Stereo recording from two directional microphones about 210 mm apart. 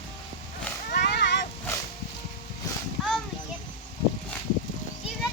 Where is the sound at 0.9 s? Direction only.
50° left (ahead or behind).